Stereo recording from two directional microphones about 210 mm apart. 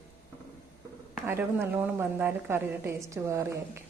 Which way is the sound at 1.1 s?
10° right (ahead or behind).